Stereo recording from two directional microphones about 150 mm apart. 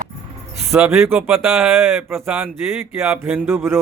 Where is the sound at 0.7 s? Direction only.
15° right (ahead or behind).